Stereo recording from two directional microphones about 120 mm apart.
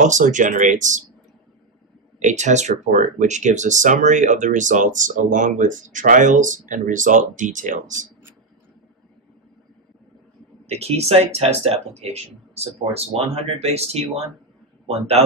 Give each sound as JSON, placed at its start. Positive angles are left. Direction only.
{"t": 0.0, "sound": "speech", "side_deg": -90}
{"t": 2.1, "sound": "speech", "side_deg": -80}
{"t": 10.7, "sound": "speech", "side_deg": -60}